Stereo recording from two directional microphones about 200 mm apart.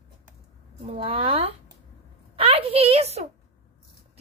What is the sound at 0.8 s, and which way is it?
A woman's voice, 25° right (ahead or behind).